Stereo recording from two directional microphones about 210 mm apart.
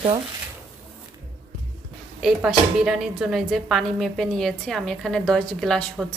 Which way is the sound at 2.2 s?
5° right (ahead or behind).